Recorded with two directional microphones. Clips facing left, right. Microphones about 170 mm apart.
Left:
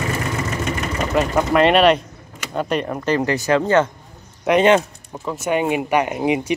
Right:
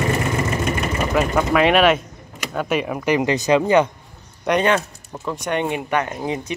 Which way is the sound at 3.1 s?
20° right (ahead or behind).